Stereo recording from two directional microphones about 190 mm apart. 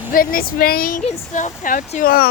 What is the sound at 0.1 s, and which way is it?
Speech, 50° left (ahead or behind).